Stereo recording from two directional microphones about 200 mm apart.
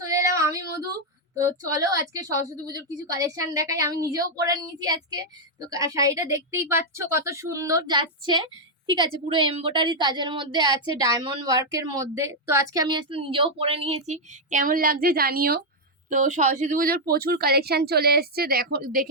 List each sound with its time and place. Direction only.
0.0 s female singing: 15° right (ahead or behind)
0.3 s a sound: 15° right (ahead or behind)
1.7 s a woman's voice: 15° right (ahead or behind); by 15.6 s 50° right (ahead or behind)
16.0 s a woman's voice: 40° right (ahead or behind)